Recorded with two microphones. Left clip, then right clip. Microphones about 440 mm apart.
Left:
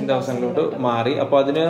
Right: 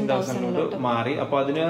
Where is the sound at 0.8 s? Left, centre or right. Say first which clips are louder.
Left 4 dB; centre.